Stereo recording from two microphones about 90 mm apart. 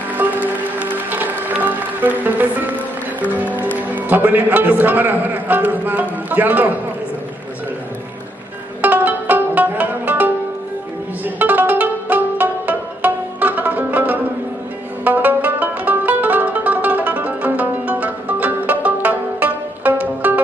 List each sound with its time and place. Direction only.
0.1 s music: 20° right (ahead or behind)
8.8 s music: 20° right (ahead or behind)